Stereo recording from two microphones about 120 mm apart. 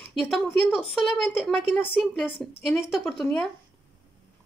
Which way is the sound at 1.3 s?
Centre (ahead or behind).